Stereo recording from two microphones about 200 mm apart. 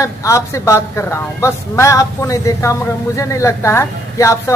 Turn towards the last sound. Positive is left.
turn(degrees=15)  # may be behind; listen again after turning